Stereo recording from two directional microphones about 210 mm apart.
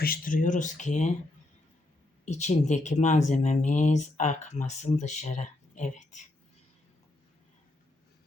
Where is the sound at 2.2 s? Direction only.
35° left (ahead or behind).